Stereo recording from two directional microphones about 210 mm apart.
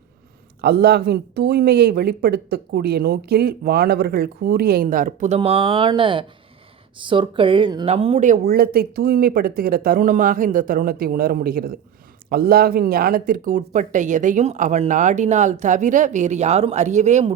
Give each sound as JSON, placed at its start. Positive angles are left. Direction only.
{"t": 0.6, "sound": "speech", "side_deg": -50}
{"t": 5.4, "sound": "speech", "side_deg": -25}